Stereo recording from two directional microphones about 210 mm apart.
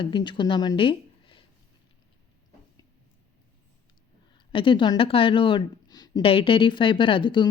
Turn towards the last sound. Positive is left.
turn(degrees=25)  # may be behind; listen again after turning